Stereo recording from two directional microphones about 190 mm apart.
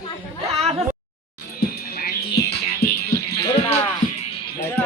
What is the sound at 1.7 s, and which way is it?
Music, 55° left (ahead or behind).